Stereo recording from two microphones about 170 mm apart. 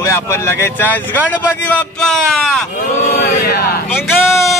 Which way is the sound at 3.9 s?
15° left (ahead or behind).